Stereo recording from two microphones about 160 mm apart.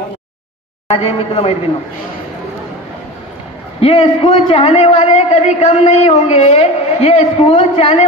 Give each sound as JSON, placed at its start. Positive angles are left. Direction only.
{"t": 0.8, "sound": "a man's voice", "side_deg": 40}
{"t": 3.8, "sound": "a man's voice", "side_deg": 40}